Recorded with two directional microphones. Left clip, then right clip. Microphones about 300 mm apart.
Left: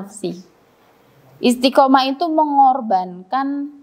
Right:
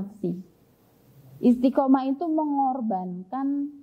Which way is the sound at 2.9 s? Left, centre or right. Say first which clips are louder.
Left 12 dB; centre.